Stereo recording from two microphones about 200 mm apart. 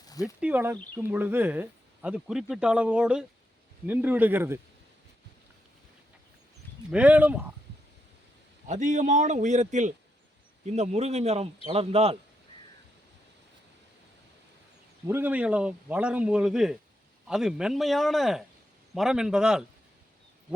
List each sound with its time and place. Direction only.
0.1 s a sound: 15° left (ahead or behind)
0.3 s speech: 5° right (ahead or behind)
6.9 s speech: 5° right (ahead or behind)
8.6 s a man's voice: 35° right (ahead or behind)
15.0 s speech: 10° right (ahead or behind)